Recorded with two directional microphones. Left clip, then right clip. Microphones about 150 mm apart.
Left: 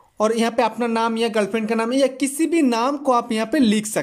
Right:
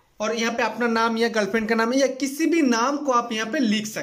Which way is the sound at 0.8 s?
20° left (ahead or behind).